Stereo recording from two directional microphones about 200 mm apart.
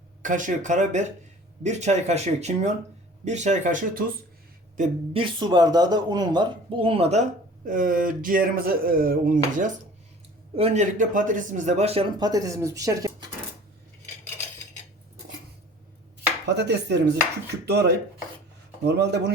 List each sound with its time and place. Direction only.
0.2 s speech: 40° right (ahead or behind)
5.1 s speech: 25° right (ahead or behind); by 9.7 s 40° right (ahead or behind)
10.5 s speech: 30° right (ahead or behind)
12.3 s speech: 15° right (ahead or behind)
16.6 s dishes: 55° right (ahead or behind)